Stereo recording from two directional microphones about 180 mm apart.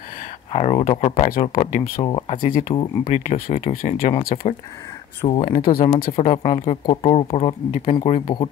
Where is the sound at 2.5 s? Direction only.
45° left (ahead or behind).